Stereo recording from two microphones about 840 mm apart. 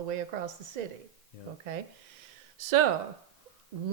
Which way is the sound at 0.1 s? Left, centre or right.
Right.